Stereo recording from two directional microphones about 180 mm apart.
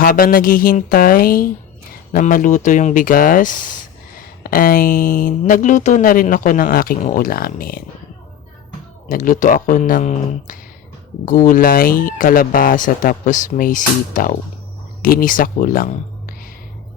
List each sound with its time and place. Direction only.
0.0 s speech: 50° left (ahead or behind)
9.0 s speech: 50° left (ahead or behind)